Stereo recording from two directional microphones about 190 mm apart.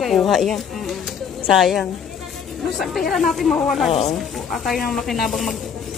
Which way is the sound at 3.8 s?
35° left (ahead or behind).